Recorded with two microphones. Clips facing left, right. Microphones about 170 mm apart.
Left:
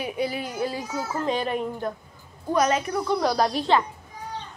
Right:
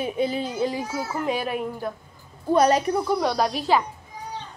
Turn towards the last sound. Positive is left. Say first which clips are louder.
# even
turn(degrees=-5)  # may be behind; listen again after turning